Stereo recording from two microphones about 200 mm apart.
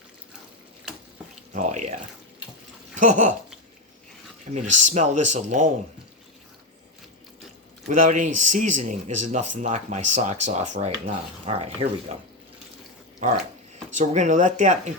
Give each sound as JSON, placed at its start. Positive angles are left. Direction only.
{"t": 1.5, "sound": "speech", "side_deg": -35}
{"t": 2.9, "sound": "speech", "side_deg": -40}
{"t": 4.5, "sound": "speech", "side_deg": -35}
{"t": 7.9, "sound": "speech", "side_deg": -40}
{"t": 14.0, "sound": "speech", "side_deg": -35}